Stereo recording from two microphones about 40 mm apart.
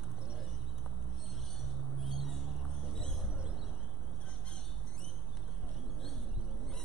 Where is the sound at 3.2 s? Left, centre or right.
Right.